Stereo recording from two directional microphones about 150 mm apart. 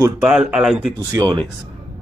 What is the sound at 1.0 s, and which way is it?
Speech, 25° right (ahead or behind).